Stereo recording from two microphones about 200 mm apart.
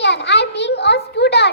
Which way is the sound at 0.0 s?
60° left (ahead or behind).